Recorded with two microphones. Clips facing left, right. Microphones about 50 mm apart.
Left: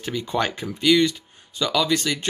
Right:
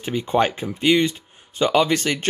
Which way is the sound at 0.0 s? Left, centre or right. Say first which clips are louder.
Right 4 dB; right.